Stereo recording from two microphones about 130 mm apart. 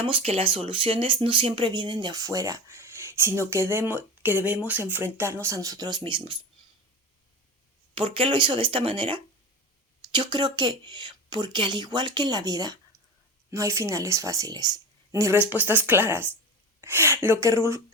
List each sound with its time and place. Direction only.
0.0 s speech: 45° right (ahead or behind); by 6.0 s 30° right (ahead or behind)
6.0 s speech: 40° right (ahead or behind)
7.9 s speech: 40° right (ahead or behind); by 15.4 s 25° right (ahead or behind)
15.4 s speech: 15° right (ahead or behind)